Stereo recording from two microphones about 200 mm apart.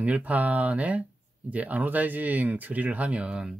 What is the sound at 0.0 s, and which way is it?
Speech, 5° right (ahead or behind).